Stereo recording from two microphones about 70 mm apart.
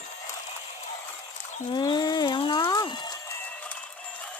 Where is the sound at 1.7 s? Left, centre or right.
Left.